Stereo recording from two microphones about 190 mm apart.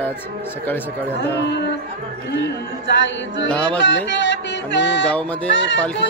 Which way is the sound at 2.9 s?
70° left (ahead or behind).